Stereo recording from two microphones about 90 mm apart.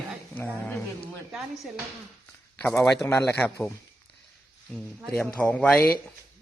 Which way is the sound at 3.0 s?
25° left (ahead or behind).